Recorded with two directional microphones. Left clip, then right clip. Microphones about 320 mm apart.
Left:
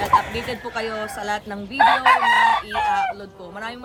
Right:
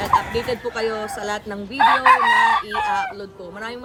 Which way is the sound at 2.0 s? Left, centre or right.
Left.